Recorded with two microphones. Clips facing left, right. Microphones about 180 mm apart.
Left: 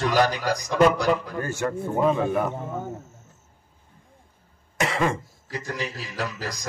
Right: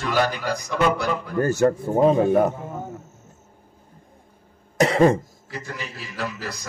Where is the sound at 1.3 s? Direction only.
40° right (ahead or behind).